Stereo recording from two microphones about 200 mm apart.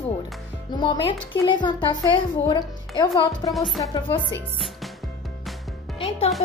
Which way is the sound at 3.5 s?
Centre (ahead or behind).